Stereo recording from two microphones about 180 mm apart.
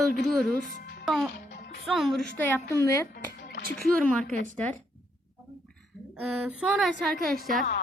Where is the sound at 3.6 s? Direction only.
55° right (ahead or behind).